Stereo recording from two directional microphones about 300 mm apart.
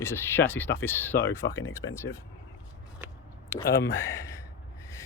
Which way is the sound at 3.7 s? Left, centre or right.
Centre.